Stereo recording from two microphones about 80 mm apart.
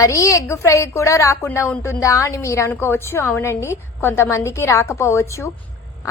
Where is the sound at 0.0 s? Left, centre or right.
Left.